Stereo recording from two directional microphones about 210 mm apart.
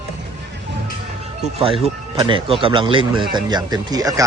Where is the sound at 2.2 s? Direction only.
25° right (ahead or behind).